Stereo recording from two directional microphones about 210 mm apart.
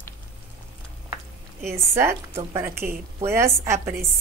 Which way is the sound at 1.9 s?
10° right (ahead or behind).